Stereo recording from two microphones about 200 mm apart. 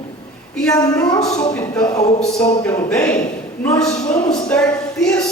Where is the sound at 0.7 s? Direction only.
15° left (ahead or behind).